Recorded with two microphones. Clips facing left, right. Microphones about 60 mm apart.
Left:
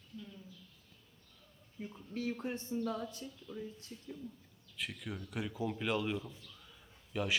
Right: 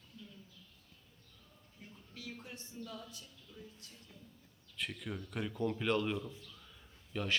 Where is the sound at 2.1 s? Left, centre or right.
Left.